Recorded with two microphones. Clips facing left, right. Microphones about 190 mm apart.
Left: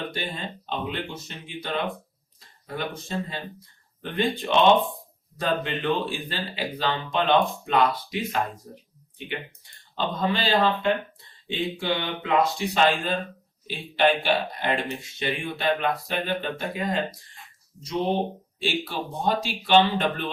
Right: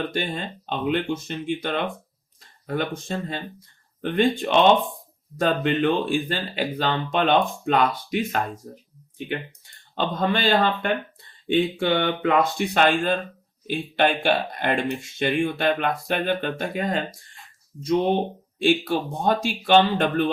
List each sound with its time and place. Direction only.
0.7 s speech: 50° right (ahead or behind)
18.6 s speech: 50° right (ahead or behind)